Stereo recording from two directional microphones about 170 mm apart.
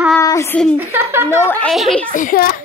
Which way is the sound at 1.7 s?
Centre (ahead or behind).